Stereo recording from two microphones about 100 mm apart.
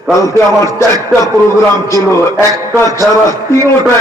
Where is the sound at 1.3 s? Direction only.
30° left (ahead or behind).